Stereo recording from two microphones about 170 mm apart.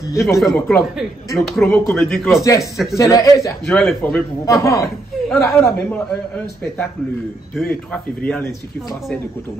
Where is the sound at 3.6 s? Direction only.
5° left (ahead or behind).